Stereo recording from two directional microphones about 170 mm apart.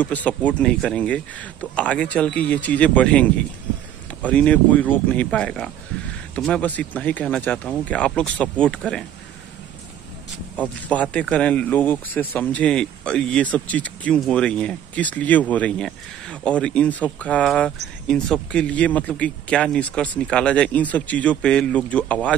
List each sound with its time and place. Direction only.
0.0 s speech: 10° left (ahead or behind)
10.5 s speech: 10° left (ahead or behind)